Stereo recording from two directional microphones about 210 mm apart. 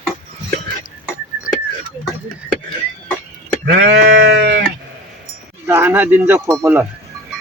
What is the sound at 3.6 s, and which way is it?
Sheep, 55° right (ahead or behind).